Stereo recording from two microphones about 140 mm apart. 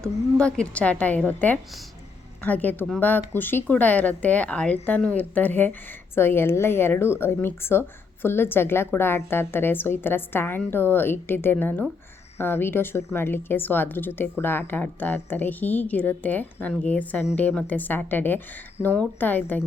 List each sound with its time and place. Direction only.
0.0 s speech: 5° left (ahead or behind)